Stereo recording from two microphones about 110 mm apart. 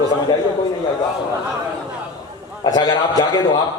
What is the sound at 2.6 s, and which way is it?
Speech, 35° left (ahead or behind).